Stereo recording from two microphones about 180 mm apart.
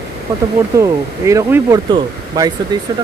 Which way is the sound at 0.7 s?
15° right (ahead or behind).